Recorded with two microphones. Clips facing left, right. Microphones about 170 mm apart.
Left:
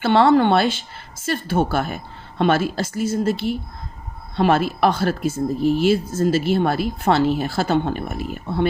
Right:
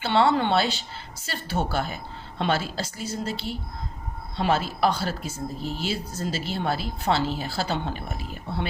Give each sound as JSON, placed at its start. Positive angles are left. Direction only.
{"t": 0.0, "sound": "a woman's voice", "side_deg": 55}